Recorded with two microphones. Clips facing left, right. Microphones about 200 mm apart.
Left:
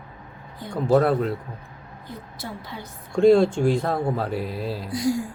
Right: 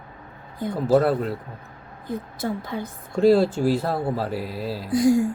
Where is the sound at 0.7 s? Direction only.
5° right (ahead or behind).